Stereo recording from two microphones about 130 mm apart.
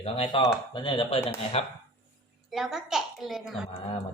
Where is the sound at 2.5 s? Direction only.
5° right (ahead or behind).